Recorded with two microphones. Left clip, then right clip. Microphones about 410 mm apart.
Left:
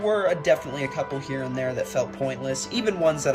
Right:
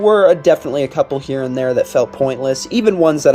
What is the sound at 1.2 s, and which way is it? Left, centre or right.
Speech, centre.